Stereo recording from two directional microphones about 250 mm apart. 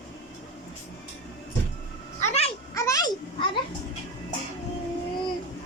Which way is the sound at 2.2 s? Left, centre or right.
Left.